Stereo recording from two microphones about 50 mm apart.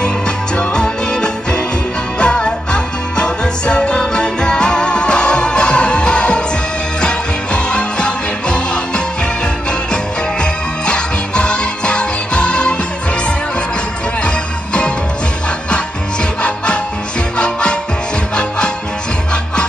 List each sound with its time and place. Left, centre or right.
0.6 s music: centre
10.4 s music: centre
14.2 s music: left
17.4 s music: centre